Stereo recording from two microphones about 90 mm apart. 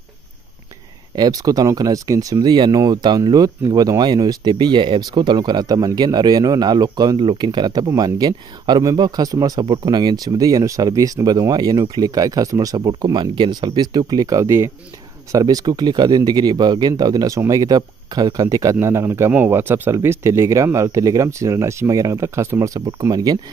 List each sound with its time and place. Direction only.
1.1 s speech: 45° right (ahead or behind)
2.4 s speech: 55° right (ahead or behind)
13.7 s speech: 50° right (ahead or behind)
15.3 s speech: 45° right (ahead or behind)